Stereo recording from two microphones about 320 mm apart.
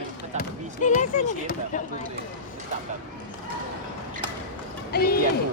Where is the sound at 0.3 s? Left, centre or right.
Left.